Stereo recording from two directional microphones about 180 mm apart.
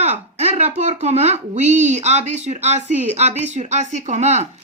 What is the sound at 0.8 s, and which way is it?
Speech, 40° right (ahead or behind).